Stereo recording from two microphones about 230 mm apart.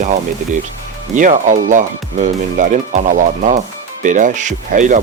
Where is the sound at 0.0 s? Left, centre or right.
Right.